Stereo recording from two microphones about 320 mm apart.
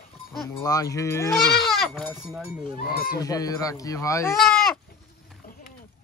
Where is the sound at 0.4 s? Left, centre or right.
Centre.